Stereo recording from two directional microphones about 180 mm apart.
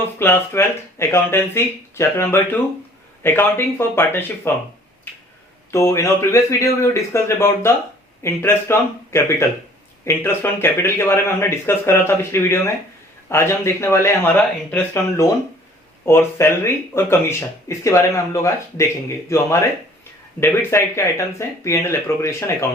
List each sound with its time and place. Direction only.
0.2 s speech: 10° left (ahead or behind)
5.7 s speech: 15° left (ahead or behind)